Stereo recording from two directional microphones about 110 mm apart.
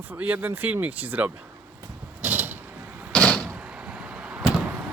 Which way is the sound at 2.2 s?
15° right (ahead or behind).